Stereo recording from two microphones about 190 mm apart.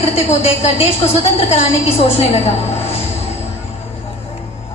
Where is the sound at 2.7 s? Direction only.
35° left (ahead or behind).